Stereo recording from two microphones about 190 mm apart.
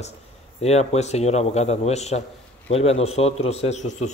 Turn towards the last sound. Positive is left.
turn(degrees=35)  # may be behind; listen again after turning